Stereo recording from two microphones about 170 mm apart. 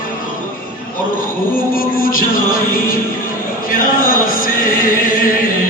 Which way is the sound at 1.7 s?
55° left (ahead or behind).